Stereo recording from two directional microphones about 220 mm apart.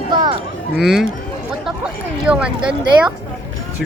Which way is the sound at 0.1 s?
20° right (ahead or behind).